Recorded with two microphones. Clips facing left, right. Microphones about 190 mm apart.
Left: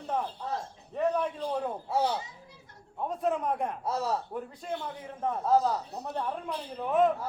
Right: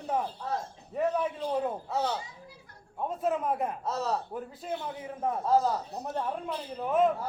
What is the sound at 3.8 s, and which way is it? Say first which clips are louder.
Speech: left 1 dB; 10° left (ahead or behind).